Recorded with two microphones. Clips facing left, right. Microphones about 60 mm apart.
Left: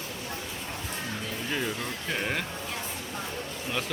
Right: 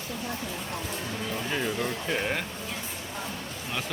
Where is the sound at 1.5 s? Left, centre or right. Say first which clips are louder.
Right 2 dB; centre.